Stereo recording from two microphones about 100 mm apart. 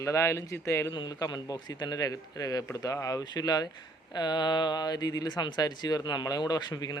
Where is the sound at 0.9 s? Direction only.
45° left (ahead or behind).